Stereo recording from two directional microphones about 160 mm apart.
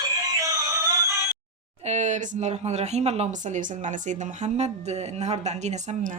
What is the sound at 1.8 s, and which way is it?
Speech, 45° right (ahead or behind).